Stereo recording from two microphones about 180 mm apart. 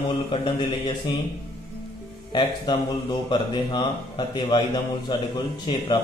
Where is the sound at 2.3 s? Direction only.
25° left (ahead or behind).